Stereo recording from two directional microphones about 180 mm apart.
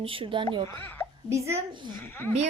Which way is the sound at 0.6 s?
10° left (ahead or behind).